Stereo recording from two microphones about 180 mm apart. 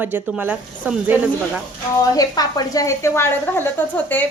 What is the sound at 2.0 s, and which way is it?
A woman's voice, 20° left (ahead or behind).